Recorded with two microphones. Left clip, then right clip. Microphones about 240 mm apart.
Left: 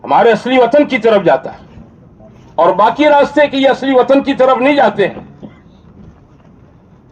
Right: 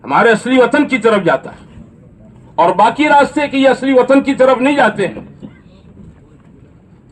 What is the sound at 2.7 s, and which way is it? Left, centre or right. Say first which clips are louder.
Speech: left 2 dB; right.